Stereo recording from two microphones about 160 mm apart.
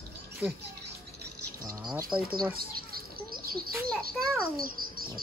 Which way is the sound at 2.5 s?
70° right (ahead or behind).